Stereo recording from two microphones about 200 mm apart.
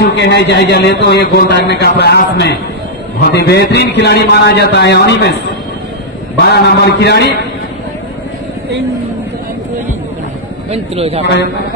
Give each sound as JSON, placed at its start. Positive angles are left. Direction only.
{"t": 0.0, "sound": "a man's voice", "side_deg": 60}
{"t": 6.4, "sound": "a man's voice", "side_deg": 55}
{"t": 10.7, "sound": "speech", "side_deg": -30}